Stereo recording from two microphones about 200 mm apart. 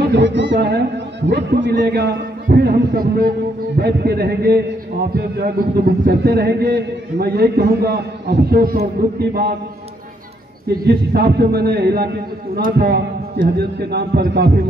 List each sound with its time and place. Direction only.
0.0 s a man's voice: 60° right (ahead or behind)
10.9 s a man's voice: 50° right (ahead or behind)